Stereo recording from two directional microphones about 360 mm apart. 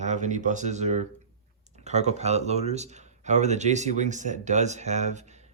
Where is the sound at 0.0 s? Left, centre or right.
Centre.